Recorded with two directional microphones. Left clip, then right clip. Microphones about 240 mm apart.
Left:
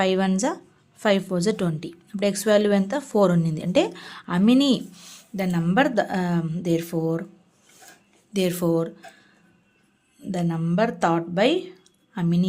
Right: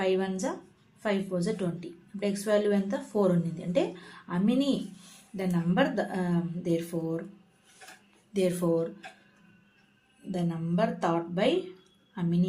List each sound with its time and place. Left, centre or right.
0.0 s a woman's voice: left
8.3 s speech: left
10.3 s a woman's voice: left